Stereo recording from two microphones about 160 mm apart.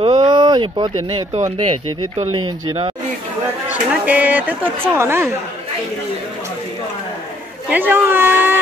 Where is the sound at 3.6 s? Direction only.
10° right (ahead or behind).